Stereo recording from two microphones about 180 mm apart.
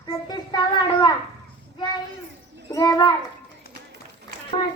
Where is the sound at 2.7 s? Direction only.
20° left (ahead or behind).